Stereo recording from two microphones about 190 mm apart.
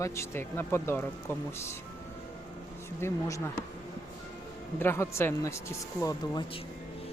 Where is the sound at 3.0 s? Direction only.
15° left (ahead or behind).